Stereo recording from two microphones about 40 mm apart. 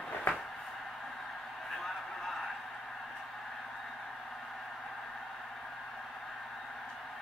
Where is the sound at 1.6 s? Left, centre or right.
Centre.